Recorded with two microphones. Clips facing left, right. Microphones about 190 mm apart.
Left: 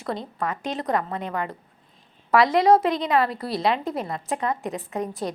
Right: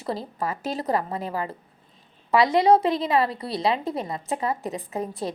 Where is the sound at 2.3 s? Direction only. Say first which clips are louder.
Left 1 dB; centre (ahead or behind).